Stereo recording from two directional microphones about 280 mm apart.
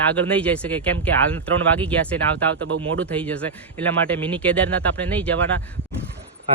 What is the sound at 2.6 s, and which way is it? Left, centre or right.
Speech, right.